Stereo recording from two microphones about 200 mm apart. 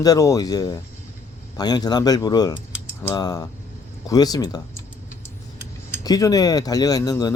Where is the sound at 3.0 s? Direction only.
20° left (ahead or behind).